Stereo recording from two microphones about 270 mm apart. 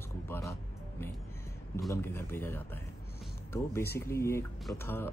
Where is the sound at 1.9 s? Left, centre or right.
Centre.